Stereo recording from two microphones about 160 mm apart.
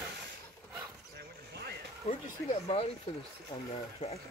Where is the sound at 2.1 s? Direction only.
40° left (ahead or behind).